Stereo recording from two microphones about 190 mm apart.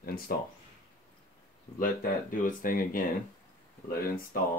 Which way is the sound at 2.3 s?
45° left (ahead or behind).